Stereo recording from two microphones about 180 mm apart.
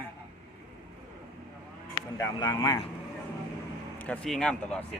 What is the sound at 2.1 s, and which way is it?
Speech, 20° left (ahead or behind).